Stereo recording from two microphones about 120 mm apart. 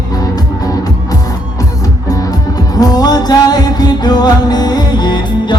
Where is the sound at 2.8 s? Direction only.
30° left (ahead or behind).